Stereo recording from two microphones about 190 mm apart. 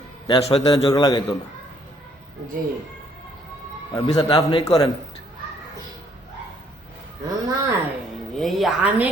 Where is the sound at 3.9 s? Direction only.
20° left (ahead or behind).